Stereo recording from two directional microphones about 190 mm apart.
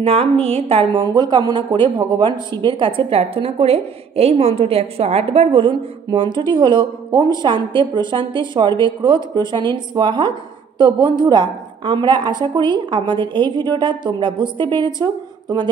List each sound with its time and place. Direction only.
0.0 s a woman's voice: 30° right (ahead or behind)